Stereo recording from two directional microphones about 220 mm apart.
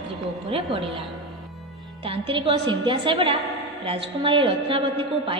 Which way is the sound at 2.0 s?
25° right (ahead or behind).